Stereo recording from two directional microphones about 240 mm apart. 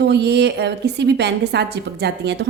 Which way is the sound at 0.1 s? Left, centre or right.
Right.